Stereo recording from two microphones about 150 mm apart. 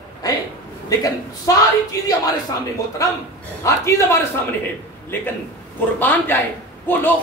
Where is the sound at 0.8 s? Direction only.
25° left (ahead or behind).